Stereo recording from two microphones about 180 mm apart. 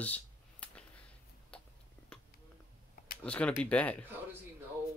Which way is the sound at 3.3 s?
5° left (ahead or behind).